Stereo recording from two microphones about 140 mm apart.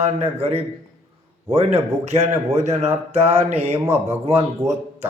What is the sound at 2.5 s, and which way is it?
Speech, 55° right (ahead or behind).